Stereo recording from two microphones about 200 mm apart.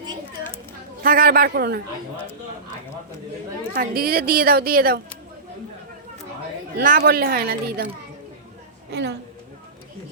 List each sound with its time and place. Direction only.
1.0 s a woman's voice: 45° right (ahead or behind)
3.8 s a woman's voice: 50° right (ahead or behind)
6.7 s a woman's voice: 50° right (ahead or behind)
8.9 s a woman's voice: 60° right (ahead or behind)